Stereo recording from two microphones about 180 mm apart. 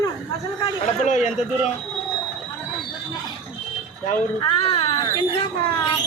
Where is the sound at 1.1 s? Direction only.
40° left (ahead or behind).